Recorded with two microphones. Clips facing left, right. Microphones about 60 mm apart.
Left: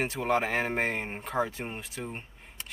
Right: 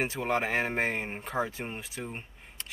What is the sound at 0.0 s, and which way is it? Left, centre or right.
A man's voice, centre.